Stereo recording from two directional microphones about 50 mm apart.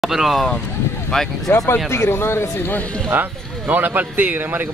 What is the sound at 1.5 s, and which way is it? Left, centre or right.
Speech, left.